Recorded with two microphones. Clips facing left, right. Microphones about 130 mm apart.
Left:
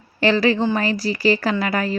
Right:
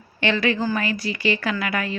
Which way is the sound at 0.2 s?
35° left (ahead or behind).